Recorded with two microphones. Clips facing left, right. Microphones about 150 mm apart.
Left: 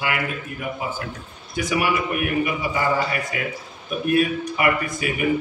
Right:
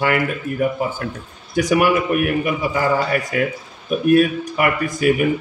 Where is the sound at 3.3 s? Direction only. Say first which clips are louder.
Right 8 dB; 50° right (ahead or behind).